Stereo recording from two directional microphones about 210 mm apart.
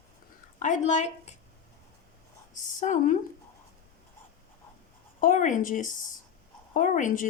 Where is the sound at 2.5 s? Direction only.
35° left (ahead or behind).